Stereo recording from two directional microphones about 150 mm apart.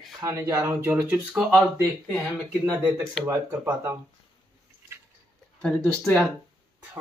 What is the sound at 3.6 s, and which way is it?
Speech, 10° right (ahead or behind).